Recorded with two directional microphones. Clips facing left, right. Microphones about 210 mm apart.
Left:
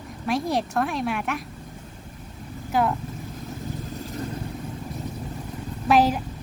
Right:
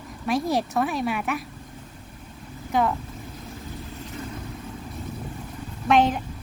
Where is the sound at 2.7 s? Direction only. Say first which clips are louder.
Even; centre (ahead or behind).